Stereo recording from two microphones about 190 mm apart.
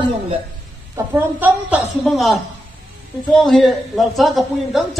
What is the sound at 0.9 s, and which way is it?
A woman's voice, 10° right (ahead or behind).